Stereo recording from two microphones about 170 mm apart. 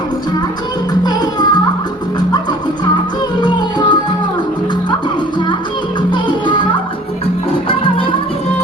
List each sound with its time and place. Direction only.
1.0 s music: 25° left (ahead or behind)
6.1 s music: 30° left (ahead or behind)